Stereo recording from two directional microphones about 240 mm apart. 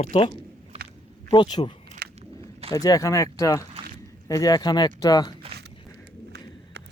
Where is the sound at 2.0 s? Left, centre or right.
Right.